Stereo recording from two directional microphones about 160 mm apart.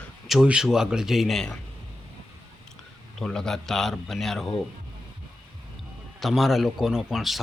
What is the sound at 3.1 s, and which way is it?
Speech, 5° left (ahead or behind).